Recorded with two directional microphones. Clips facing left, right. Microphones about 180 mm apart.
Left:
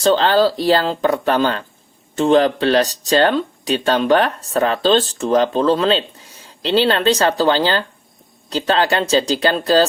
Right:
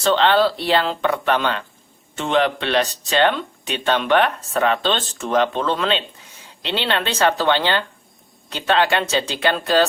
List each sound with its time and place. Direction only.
0.0 s speech: 35° left (ahead or behind)